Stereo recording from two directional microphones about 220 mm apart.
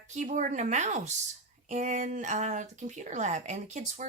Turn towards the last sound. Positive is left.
turn(degrees=-30)  # may be behind; listen again after turning